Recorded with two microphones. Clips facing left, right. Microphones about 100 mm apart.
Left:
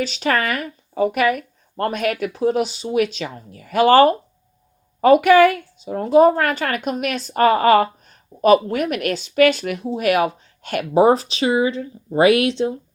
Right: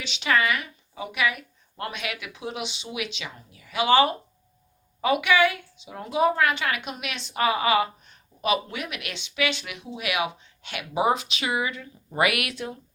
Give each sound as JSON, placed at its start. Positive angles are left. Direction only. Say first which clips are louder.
{"t": 0.0, "sound": "a woman's voice", "louder": "left 4 dB", "side_deg": 40}